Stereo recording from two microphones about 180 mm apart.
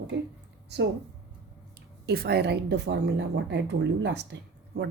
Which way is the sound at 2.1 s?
65° right (ahead or behind).